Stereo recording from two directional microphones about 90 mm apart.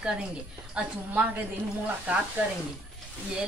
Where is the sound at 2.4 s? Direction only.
15° right (ahead or behind).